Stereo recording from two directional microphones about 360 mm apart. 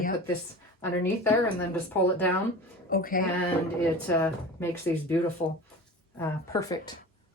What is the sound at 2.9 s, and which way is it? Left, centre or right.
Speech, left.